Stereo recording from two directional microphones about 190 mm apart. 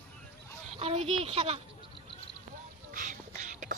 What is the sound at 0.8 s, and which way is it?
Speech, 30° right (ahead or behind).